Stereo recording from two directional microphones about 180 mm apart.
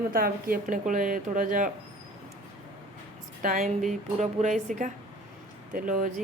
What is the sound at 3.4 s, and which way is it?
Speech, 50° right (ahead or behind).